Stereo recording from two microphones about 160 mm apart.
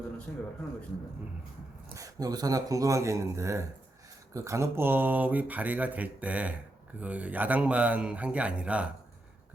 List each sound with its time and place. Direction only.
0.3 s speech: 10° left (ahead or behind)
2.0 s speech: 20° right (ahead or behind)